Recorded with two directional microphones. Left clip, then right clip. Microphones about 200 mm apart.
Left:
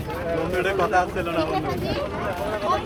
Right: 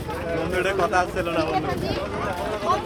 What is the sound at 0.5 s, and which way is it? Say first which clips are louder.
Speech: even; 10° right (ahead or behind).